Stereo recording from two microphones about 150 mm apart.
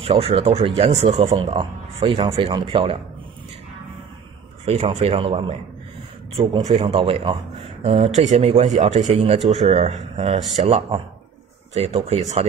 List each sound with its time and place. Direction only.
0.0 s speech: 40° right (ahead or behind)
1.1 s speech: 30° right (ahead or behind)
4.6 s speech: 45° right (ahead or behind)
6.6 s speech: 50° right (ahead or behind)